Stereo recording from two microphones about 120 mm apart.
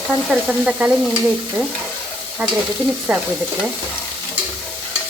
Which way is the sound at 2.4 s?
15° right (ahead or behind).